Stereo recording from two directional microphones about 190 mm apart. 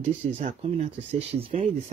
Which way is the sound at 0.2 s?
35° right (ahead or behind).